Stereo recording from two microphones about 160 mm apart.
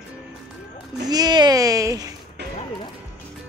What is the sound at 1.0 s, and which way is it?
Babbling, 25° right (ahead or behind).